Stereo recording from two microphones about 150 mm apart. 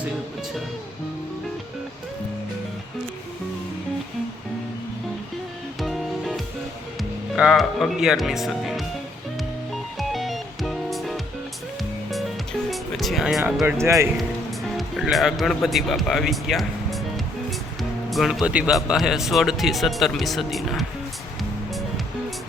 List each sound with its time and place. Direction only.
5.8 s music: centre (ahead or behind)
7.3 s speech: centre (ahead or behind)
10.0 s music: centre (ahead or behind)
12.7 s music: centre (ahead or behind)
13.7 s speech: 20° right (ahead or behind)
14.8 s speech: centre (ahead or behind)
18.1 s speech: centre (ahead or behind)